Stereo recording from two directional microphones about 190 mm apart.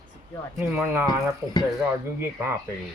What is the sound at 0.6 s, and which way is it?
Speech, 5° right (ahead or behind).